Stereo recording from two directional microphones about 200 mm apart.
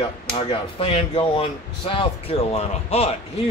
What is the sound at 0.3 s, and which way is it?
Speech, 25° left (ahead or behind).